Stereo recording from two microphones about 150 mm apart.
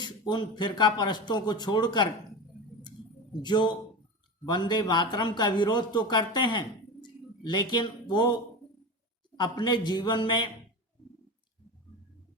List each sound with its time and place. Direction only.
0.0 s a man's voice: 30° left (ahead or behind)
3.4 s a man's voice: 30° left (ahead or behind)
9.4 s a man's voice: 30° left (ahead or behind)